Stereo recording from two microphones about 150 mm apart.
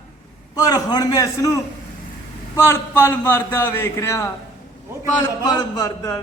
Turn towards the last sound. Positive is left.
turn(degrees=25)  # may be behind; listen again after turning